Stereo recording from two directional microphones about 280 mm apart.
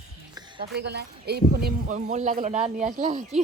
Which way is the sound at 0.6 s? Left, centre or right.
Right.